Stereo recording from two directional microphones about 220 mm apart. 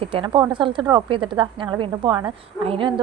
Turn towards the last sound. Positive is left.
turn(degrees=-20)  # may be behind; listen again after turning